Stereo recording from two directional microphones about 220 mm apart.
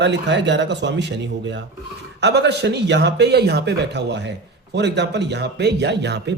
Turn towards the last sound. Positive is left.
turn(degrees=-50)  # may be behind; listen again after turning